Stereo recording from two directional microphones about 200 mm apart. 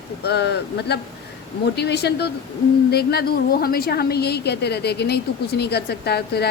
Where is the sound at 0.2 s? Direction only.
55° left (ahead or behind).